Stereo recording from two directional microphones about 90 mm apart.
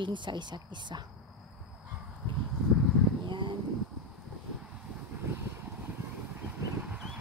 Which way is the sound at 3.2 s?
60° right (ahead or behind).